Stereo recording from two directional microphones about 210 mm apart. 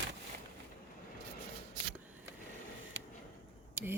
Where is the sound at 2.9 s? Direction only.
65° right (ahead or behind).